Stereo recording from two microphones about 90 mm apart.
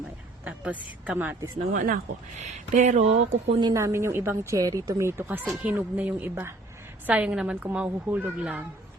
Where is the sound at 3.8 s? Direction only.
30° right (ahead or behind); by 8.6 s 15° right (ahead or behind).